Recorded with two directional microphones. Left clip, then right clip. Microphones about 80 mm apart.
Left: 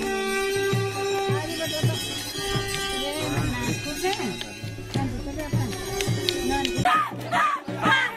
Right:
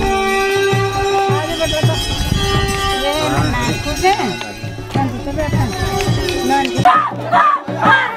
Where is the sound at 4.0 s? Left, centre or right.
Right.